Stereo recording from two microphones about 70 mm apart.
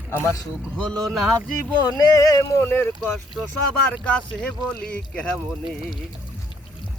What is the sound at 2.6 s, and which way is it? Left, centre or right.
Speech, left.